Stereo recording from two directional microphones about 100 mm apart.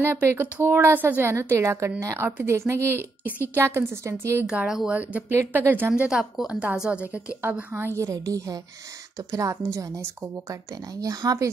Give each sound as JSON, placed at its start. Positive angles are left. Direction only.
{"t": 0.0, "sound": "a woman's voice", "side_deg": -25}
{"t": 2.2, "sound": "a woman's voice", "side_deg": -25}
{"t": 4.5, "sound": "a woman's voice", "side_deg": -5}
{"t": 6.0, "sound": "a woman's voice", "side_deg": -5}